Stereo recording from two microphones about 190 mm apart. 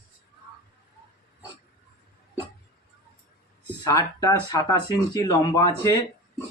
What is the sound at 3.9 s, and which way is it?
Speech, 15° left (ahead or behind).